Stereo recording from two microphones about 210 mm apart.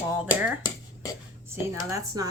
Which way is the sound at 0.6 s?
15° left (ahead or behind).